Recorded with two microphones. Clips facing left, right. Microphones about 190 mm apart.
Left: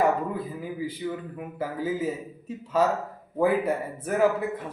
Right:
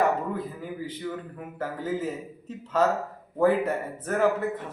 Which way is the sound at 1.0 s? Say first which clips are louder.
Left 2 dB; 15° left (ahead or behind).